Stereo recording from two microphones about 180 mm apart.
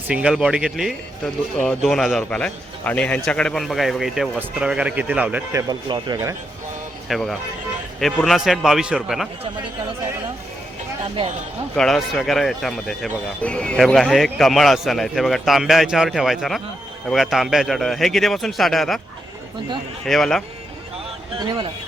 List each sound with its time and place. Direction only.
0.1 s a man's voice: 5° right (ahead or behind)
7.1 s a man's voice: centre (ahead or behind)
11.8 s a man's voice: centre (ahead or behind)
20.1 s a man's voice: centre (ahead or behind)
21.3 s speech: 25° right (ahead or behind)